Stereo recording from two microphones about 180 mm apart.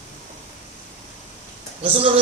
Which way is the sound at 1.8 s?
30° right (ahead or behind).